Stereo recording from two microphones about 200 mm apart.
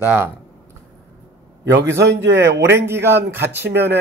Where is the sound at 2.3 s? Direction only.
15° right (ahead or behind).